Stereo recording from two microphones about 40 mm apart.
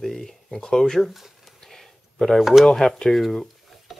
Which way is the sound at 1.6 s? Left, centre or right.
Centre.